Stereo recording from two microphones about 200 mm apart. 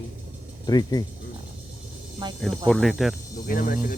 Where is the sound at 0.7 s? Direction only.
20° left (ahead or behind).